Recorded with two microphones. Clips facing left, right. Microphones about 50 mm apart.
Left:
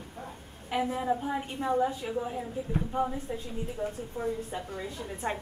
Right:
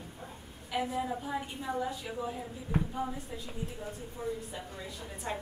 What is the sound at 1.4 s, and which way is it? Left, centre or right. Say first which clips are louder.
A woman's voice: left 7 dB; left.